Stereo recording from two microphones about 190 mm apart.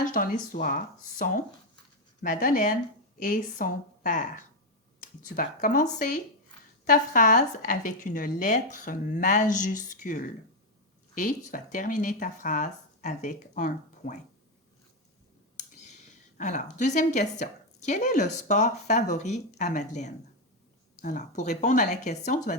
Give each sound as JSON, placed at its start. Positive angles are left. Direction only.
{"t": 0.0, "sound": "speech", "side_deg": 45}
{"t": 5.4, "sound": "speech", "side_deg": 45}
{"t": 15.5, "sound": "speech", "side_deg": 40}